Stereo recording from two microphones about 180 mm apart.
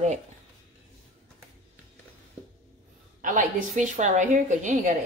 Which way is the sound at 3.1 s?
45° right (ahead or behind).